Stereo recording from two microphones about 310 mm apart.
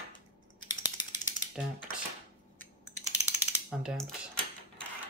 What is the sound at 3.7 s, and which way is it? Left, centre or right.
Speech, centre.